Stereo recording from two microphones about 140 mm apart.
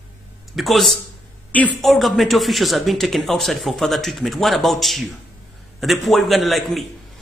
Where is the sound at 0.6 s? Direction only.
Centre (ahead or behind).